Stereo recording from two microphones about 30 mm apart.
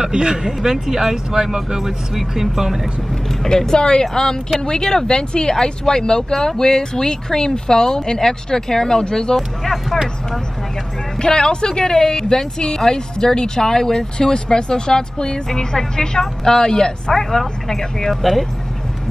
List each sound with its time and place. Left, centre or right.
0.0 s speech: right
2.1 s speech: centre
3.4 s speech: left
11.1 s speech: left